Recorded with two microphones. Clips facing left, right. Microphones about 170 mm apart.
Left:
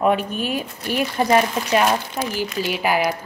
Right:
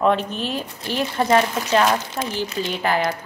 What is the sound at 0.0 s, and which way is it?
Speech, 10° left (ahead or behind).